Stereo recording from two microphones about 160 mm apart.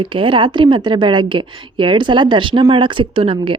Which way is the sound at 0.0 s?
30° right (ahead or behind).